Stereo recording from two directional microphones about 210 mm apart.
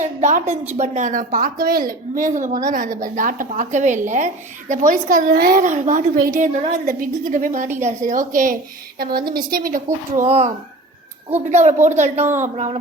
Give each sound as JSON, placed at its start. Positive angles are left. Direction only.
{"t": 0.0, "sound": "a woman's voice", "side_deg": -35}
{"t": 10.2, "sound": "a child's voice", "side_deg": -30}